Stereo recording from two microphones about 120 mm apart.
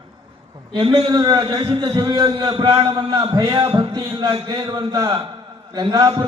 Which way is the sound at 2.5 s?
45° right (ahead or behind).